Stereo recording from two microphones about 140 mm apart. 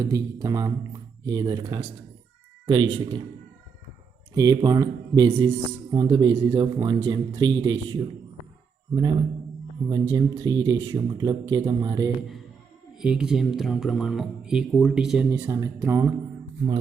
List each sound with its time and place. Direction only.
0.0 s speech: 25° right (ahead or behind)
4.4 s speech: 25° right (ahead or behind)
9.8 s speech: 30° right (ahead or behind)
13.0 s speech: 5° right (ahead or behind)
15.3 s speech: 20° right (ahead or behind)